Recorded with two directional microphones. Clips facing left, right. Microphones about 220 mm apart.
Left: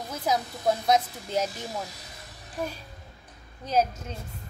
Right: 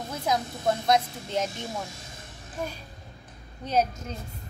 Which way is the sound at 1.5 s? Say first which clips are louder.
Even; 25° right (ahead or behind).